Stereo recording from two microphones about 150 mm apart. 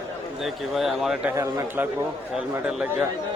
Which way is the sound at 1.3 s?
20° right (ahead or behind).